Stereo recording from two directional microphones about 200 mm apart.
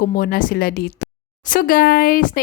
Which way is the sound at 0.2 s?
45° left (ahead or behind).